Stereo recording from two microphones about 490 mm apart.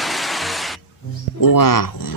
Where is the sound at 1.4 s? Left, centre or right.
Left.